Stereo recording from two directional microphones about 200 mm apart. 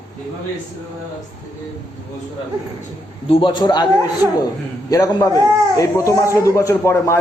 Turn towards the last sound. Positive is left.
turn(degrees=15)  # may be behind; listen again after turning